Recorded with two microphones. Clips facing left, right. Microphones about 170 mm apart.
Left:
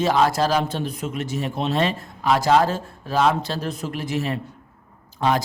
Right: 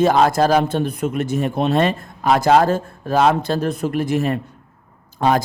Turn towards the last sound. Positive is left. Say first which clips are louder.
# right 4 dB
turn(degrees=-50)  # may be behind; listen again after turning